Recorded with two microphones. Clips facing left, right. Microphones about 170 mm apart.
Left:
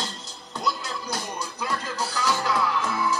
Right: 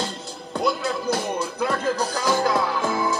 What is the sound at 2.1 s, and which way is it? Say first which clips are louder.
Music: right 1 dB; 40° right (ahead or behind).